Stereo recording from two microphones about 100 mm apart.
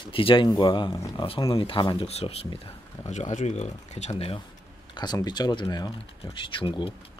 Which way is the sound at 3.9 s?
85° left.